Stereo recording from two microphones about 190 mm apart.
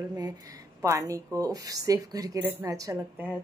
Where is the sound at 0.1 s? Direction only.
20° right (ahead or behind).